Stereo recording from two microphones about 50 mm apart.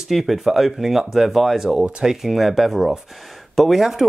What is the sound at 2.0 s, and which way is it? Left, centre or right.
Speech, centre.